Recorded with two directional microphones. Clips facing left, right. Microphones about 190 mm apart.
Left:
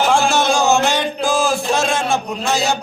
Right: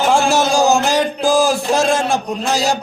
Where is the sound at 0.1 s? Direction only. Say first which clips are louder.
Right 1 dB; 35° right (ahead or behind).